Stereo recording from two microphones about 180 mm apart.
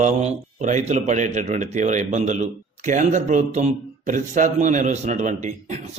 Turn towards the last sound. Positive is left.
turn(degrees=-40)  # may be behind; listen again after turning